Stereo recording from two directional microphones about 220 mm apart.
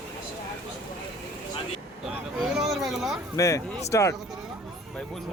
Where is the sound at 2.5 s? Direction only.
Centre (ahead or behind).